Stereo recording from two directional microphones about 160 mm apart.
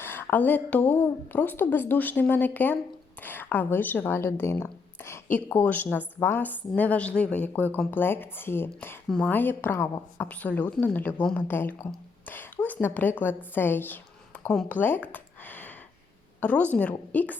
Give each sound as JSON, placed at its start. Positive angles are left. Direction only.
{"t": 0.0, "sound": "a woman's voice", "side_deg": 15}
{"t": 9.7, "sound": "a woman's voice", "side_deg": 25}
{"t": 10.2, "sound": "a woman's voice", "side_deg": 10}